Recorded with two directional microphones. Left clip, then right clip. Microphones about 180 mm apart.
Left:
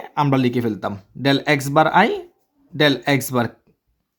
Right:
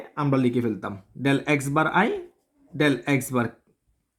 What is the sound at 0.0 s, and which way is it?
Speech, 35° left (ahead or behind).